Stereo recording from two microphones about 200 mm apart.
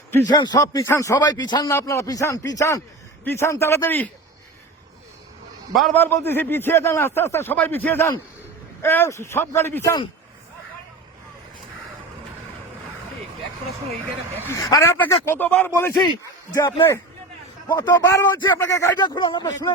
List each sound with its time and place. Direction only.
0.3 s a man's voice: 20° left (ahead or behind)
5.7 s a man's voice: 5° left (ahead or behind)
14.4 s a man's voice: 15° left (ahead or behind)
16.6 s speech: 25° left (ahead or behind)